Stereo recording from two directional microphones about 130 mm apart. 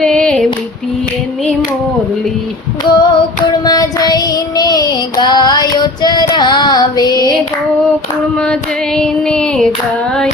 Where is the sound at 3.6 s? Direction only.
30° left (ahead or behind).